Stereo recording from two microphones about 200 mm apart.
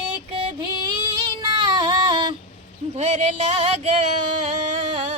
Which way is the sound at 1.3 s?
20° right (ahead or behind).